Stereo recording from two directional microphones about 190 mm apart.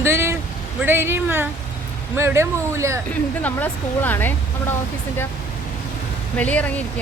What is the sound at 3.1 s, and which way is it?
Speech, 10° left (ahead or behind).